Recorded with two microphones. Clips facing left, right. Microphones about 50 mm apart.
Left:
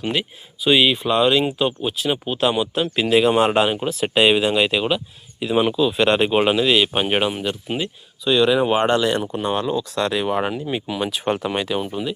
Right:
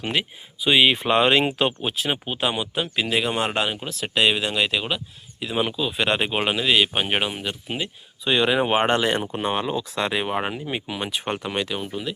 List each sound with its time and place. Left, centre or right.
0.0 s speech: right
0.6 s speech: centre
0.9 s speech: right
2.2 s speech: centre
8.2 s speech: right; by 12.1 s centre